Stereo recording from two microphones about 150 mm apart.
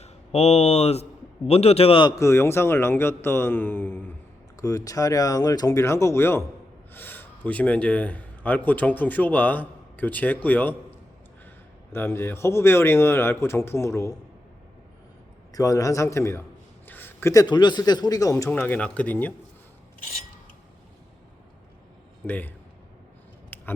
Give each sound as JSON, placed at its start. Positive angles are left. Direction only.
{"t": 0.0, "sound": "a man's voice", "side_deg": 45}
{"t": 2.1, "sound": "a man's voice", "side_deg": 20}
{"t": 11.9, "sound": "speech", "side_deg": 15}
{"t": 15.5, "sound": "speech", "side_deg": 20}
{"t": 16.8, "sound": "a sound", "side_deg": 15}
{"t": 17.4, "sound": "speech", "side_deg": 30}
{"t": 22.3, "sound": "speech", "side_deg": 10}
{"t": 23.5, "sound": "biting", "side_deg": 15}